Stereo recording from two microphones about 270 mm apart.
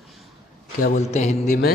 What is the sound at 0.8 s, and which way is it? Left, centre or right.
Speech, left.